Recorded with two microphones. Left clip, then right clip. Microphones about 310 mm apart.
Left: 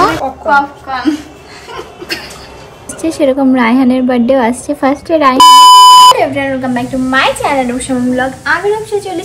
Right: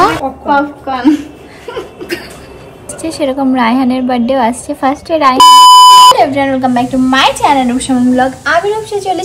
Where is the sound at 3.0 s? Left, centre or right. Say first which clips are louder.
Left 3 dB; centre.